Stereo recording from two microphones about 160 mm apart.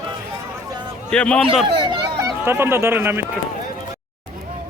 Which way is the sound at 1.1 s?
5° left (ahead or behind).